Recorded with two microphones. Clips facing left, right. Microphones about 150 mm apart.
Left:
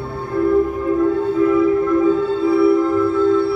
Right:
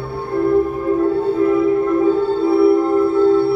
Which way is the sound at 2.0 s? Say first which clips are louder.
Right 1 dB; 55° right (ahead or behind).